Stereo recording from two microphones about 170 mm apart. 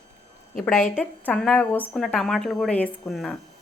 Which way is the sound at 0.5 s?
10° left (ahead or behind).